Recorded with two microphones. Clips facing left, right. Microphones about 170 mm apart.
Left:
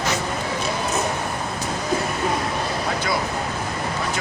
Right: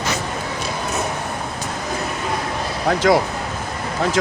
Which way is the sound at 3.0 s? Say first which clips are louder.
Right 12 dB; 90° right.